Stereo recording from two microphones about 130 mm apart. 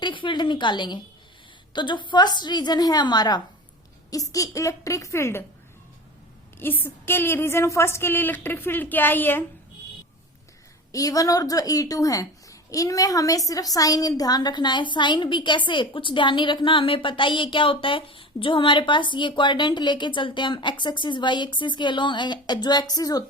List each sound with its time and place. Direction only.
0.0 s a sound: 40° left (ahead or behind)
1.7 s a woman's voice: 35° left (ahead or behind); by 5.5 s 20° left (ahead or behind)
6.6 s a woman's voice: 15° left (ahead or behind)
10.9 s a woman's voice: 25° left (ahead or behind)